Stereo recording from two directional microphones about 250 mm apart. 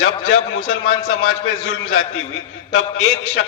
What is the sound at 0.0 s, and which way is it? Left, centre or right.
A man's voice, left.